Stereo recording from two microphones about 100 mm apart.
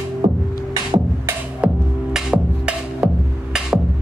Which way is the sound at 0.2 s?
50° right (ahead or behind).